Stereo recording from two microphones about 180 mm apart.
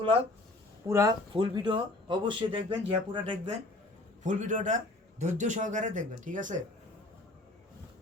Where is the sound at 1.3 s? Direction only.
25° right (ahead or behind).